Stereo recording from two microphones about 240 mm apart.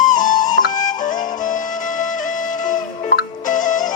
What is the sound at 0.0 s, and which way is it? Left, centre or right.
Music, left.